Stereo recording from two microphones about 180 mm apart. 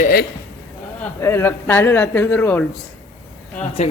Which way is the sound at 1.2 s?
15° left (ahead or behind).